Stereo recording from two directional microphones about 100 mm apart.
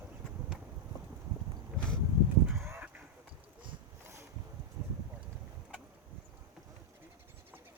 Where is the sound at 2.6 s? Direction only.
20° right (ahead or behind).